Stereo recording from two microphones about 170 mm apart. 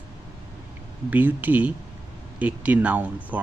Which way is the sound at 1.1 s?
10° right (ahead or behind).